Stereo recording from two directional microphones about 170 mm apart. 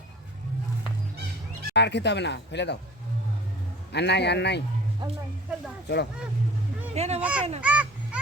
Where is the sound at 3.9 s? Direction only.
85° left.